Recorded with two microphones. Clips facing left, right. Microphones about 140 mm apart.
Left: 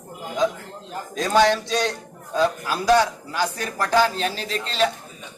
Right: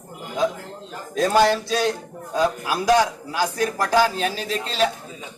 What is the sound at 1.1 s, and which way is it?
A man's voice, 5° right (ahead or behind).